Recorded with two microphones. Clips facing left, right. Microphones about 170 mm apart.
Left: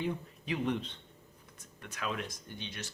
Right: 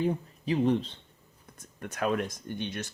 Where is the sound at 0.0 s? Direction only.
35° right (ahead or behind).